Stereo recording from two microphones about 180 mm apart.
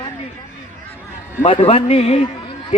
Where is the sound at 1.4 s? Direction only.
35° left (ahead or behind).